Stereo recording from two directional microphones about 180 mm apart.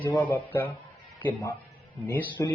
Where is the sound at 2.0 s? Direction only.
10° left (ahead or behind).